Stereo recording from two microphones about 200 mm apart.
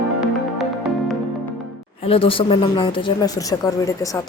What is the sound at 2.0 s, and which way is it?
A woman's voice, 25° left (ahead or behind).